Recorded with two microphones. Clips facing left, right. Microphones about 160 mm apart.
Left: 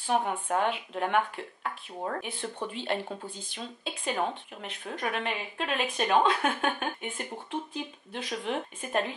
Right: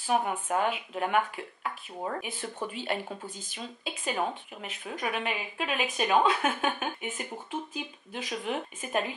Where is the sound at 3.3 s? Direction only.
45° right (ahead or behind).